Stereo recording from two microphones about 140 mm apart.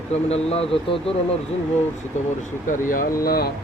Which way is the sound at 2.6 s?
75° left (ahead or behind).